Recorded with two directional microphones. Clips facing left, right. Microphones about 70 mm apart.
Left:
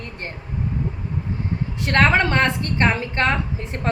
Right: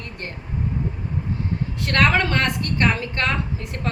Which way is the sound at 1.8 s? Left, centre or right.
Left.